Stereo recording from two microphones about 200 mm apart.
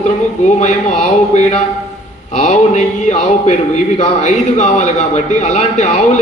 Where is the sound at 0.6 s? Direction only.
35° left (ahead or behind).